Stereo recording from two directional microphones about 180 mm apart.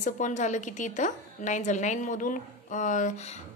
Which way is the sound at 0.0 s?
45° left (ahead or behind).